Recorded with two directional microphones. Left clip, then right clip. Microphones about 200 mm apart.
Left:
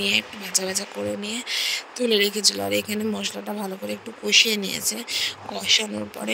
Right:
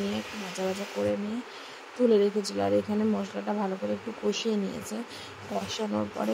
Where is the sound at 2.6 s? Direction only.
Centre (ahead or behind).